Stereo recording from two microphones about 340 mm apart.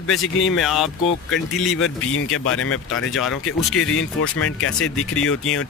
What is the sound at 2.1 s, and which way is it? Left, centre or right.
Speech, left.